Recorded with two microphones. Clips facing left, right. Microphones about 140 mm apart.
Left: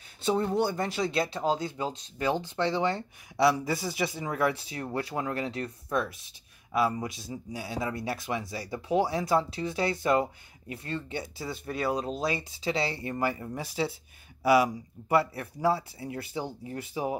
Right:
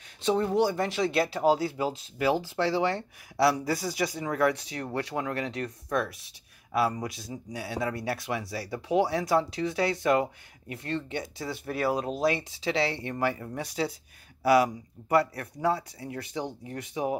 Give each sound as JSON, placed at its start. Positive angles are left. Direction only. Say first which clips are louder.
{"t": 0.2, "sound": "speech", "louder": "right 2 dB", "side_deg": 0}
{"t": 5.2, "sound": "speech", "louder": "even", "side_deg": 30}
{"t": 5.5, "sound": "speech", "louder": "right 1 dB", "side_deg": 0}